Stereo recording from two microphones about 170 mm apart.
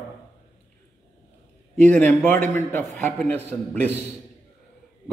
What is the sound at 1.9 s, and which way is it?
A man's voice, 10° left (ahead or behind).